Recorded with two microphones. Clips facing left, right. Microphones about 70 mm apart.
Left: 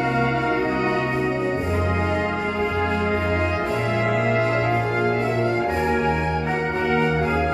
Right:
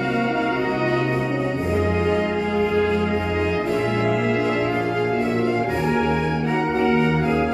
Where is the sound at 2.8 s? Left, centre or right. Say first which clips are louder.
Right 1 dB; left.